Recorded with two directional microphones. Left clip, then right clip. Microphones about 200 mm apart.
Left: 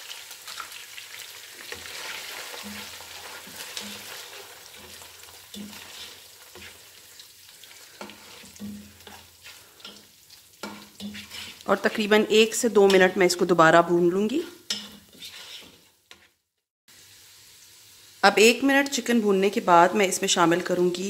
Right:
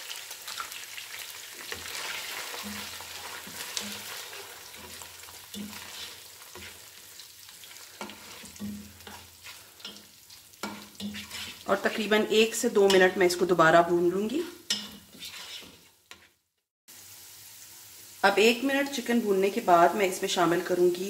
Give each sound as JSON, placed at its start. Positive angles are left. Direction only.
{"t": 8.6, "sound": "frying", "side_deg": -5}
{"t": 11.6, "sound": "speech", "side_deg": 55}
{"t": 18.2, "sound": "speech", "side_deg": 50}